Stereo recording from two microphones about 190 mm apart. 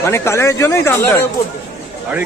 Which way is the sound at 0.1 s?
15° left (ahead or behind).